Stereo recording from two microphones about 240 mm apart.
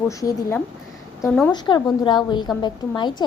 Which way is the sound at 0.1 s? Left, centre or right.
Centre.